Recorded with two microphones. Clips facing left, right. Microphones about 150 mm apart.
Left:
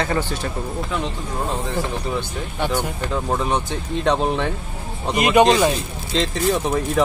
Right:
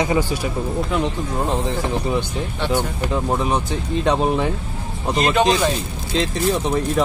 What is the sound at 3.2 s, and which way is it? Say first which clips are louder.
Speech: even; 5° right (ahead or behind).